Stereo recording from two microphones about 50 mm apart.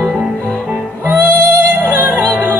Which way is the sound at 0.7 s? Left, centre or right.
Right.